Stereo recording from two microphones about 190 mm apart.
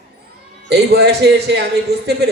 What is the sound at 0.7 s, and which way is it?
Speech, 60° right (ahead or behind).